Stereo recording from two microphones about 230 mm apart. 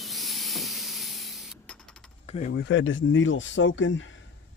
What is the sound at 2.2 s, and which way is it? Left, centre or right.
Speech, left.